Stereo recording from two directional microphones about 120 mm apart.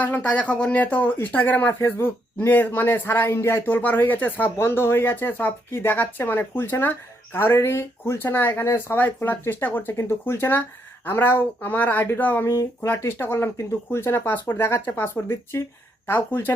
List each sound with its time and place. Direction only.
0.0 s speech: 10° left (ahead or behind)